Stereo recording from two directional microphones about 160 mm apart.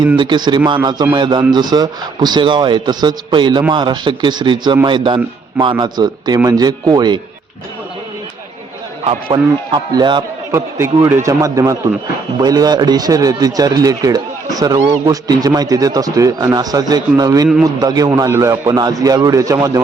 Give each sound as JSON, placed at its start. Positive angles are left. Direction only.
{"t": 0.2, "sound": "speech", "side_deg": -30}
{"t": 9.0, "sound": "speech", "side_deg": -30}
{"t": 10.5, "sound": "speech", "side_deg": -15}